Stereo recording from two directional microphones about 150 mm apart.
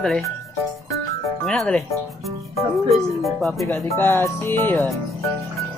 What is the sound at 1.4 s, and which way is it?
Speech, 5° left (ahead or behind).